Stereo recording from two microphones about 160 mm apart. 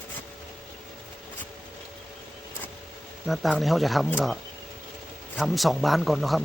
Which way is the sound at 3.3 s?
Centre (ahead or behind).